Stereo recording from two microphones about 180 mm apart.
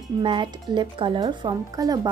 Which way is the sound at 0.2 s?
25° right (ahead or behind).